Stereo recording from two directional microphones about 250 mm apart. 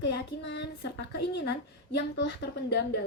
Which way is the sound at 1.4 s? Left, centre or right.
Left.